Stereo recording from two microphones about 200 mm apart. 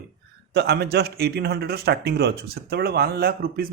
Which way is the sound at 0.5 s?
55° right (ahead or behind).